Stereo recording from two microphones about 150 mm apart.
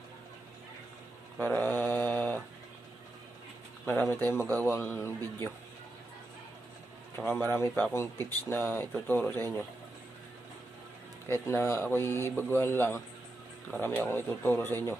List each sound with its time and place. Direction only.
1.4 s mantra: 10° left (ahead or behind)
4.1 s speech: 15° left (ahead or behind)
7.2 s speech: 10° left (ahead or behind)
11.3 s speech: 15° left (ahead or behind)